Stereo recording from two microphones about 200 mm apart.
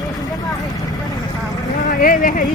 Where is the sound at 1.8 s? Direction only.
45° left (ahead or behind).